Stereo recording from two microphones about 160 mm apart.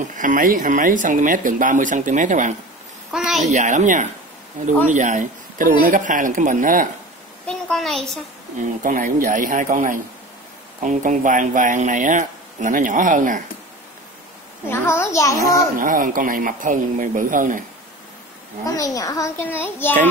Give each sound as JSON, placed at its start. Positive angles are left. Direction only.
{"t": 0.1, "sound": "speech", "side_deg": -55}
{"t": 3.1, "sound": "a child's voice", "side_deg": 0}
{"t": 3.5, "sound": "speech", "side_deg": -50}
{"t": 7.4, "sound": "a child's voice", "side_deg": 0}
{"t": 8.5, "sound": "speech", "side_deg": -55}
{"t": 14.7, "sound": "a child's voice", "side_deg": 15}
{"t": 15.7, "sound": "speech", "side_deg": -55}
{"t": 18.7, "sound": "a child's voice", "side_deg": 20}